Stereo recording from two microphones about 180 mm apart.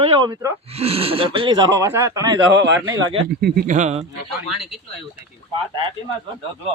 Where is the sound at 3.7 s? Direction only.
40° right (ahead or behind).